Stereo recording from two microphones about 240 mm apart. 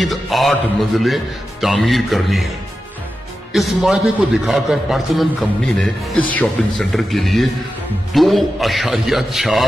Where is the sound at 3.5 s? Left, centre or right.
Centre.